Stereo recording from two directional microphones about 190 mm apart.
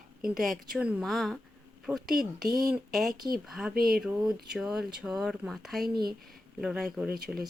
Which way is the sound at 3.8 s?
50° right (ahead or behind).